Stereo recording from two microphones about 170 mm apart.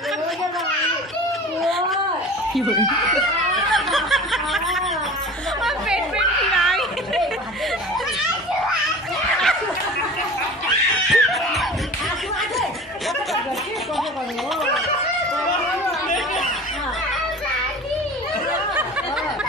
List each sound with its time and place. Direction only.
1.6 s cat: centre (ahead or behind)
2.5 s speech: centre (ahead or behind)
3.7 s snicker: centre (ahead or behind)
5.6 s chatter: centre (ahead or behind)
11.1 s music: centre (ahead or behind)